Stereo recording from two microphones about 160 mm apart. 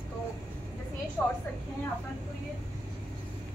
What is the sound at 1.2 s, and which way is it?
Speech, 15° left (ahead or behind).